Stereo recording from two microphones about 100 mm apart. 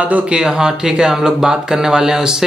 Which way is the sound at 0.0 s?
10° right (ahead or behind).